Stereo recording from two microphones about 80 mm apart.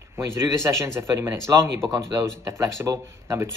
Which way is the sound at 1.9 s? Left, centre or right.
Right.